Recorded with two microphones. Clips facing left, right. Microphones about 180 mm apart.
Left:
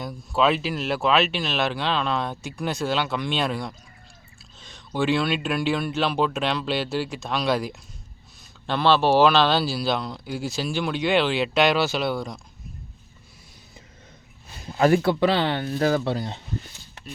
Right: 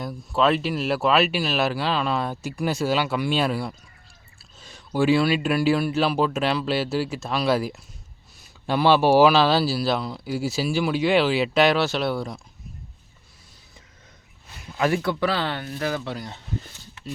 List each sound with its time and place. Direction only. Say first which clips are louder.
0.0 s speech: even; centre (ahead or behind)
14.6 s speech: left 4 dB; 35° left (ahead or behind)
15.1 s speech: left 3 dB; 20° left (ahead or behind)